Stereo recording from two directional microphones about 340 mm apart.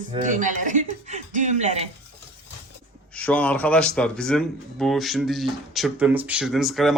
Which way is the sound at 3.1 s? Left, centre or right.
Centre.